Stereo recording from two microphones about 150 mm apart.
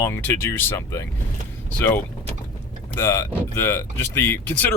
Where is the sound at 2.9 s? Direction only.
20° left (ahead or behind).